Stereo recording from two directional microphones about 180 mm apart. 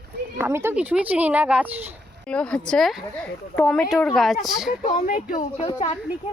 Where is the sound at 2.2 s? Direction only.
5° left (ahead or behind).